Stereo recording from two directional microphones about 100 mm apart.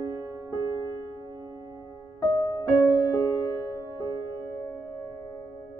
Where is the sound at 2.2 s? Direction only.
40° left (ahead or behind).